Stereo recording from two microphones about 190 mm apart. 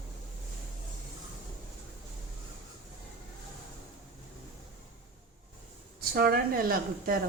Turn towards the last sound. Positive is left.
turn(degrees=-50)  # may be behind; listen again after turning